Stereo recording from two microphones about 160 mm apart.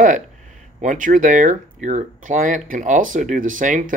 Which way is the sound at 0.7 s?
55° right (ahead or behind).